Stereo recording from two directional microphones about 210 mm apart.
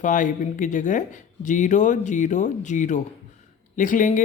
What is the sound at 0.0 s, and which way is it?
Speech, 35° left (ahead or behind).